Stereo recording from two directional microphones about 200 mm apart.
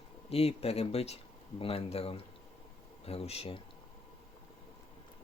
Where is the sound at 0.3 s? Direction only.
30° left (ahead or behind).